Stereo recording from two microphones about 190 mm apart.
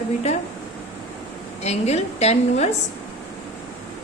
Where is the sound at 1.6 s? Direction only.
35° left (ahead or behind).